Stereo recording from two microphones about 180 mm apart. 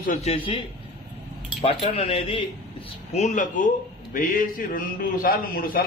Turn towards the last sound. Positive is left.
turn(degrees=50)  # may be behind; listen again after turning